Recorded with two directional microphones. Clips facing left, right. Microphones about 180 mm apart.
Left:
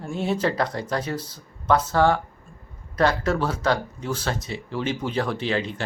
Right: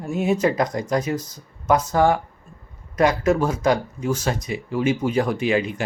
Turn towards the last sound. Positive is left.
turn(degrees=-10)  # may be behind; listen again after turning